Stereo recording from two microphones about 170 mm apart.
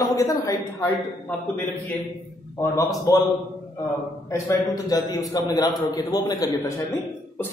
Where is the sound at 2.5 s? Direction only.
15° left (ahead or behind).